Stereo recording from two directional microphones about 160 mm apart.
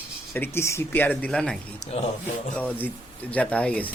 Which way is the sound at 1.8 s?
45° left (ahead or behind).